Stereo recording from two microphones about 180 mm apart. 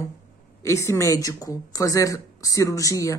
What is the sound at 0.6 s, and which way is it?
A woman's voice, 15° left (ahead or behind).